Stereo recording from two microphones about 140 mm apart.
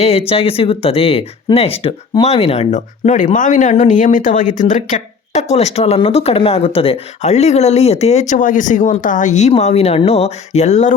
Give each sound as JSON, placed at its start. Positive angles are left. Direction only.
{"t": 0.0, "sound": "speech", "side_deg": 45}